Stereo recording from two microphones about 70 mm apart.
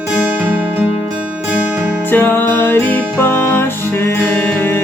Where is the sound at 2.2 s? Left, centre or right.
Left.